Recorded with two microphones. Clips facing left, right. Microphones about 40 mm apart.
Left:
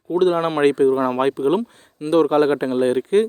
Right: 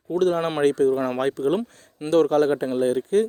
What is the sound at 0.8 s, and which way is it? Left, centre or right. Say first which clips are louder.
Speech: left 4 dB; left.